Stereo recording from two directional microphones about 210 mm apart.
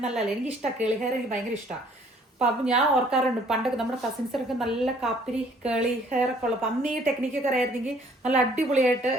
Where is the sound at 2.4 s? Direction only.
5° right (ahead or behind).